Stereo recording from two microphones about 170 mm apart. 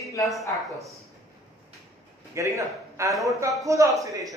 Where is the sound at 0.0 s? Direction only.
20° left (ahead or behind).